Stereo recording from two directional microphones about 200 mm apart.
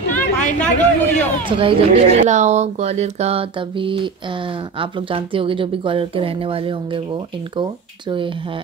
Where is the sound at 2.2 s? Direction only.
35° right (ahead or behind).